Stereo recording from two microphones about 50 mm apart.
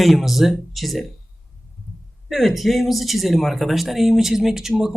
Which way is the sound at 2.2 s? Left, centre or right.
Centre.